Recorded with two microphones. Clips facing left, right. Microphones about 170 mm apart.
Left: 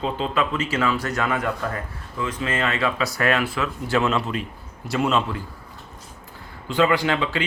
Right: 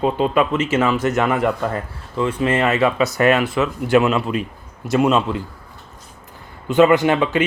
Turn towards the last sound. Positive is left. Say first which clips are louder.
# right 6 dB
turn(degrees=-20)  # may be behind; listen again after turning